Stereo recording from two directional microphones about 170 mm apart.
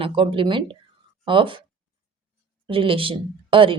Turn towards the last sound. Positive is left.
turn(degrees=-30)  # may be behind; listen again after turning